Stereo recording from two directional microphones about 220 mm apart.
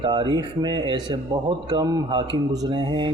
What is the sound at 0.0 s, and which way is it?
Speech, 20° right (ahead or behind).